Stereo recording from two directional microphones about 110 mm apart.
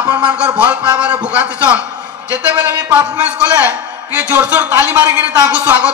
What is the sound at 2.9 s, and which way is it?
A man's voice, 15° right (ahead or behind).